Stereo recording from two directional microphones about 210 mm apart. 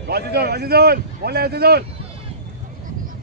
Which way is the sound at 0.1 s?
50° right (ahead or behind).